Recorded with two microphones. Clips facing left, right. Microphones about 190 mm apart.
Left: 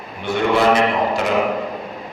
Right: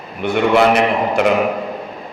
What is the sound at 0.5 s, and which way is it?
Speech, 65° right (ahead or behind).